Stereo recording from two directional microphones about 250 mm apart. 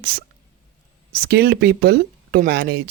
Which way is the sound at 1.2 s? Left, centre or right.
Right.